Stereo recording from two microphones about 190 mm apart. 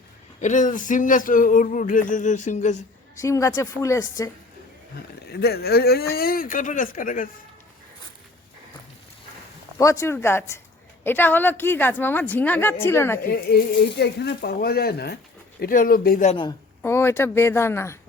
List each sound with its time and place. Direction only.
0.4 s speech: 40° left (ahead or behind)
3.2 s a woman's voice: 15° left (ahead or behind)
5.3 s speech: 55° left (ahead or behind)
9.7 s a woman's voice: 15° left (ahead or behind)
13.2 s speech: 55° left (ahead or behind)
15.6 s speech: 45° left (ahead or behind)
16.3 s a woman's voice: 25° left (ahead or behind)
16.8 s a woman's voice: 10° left (ahead or behind)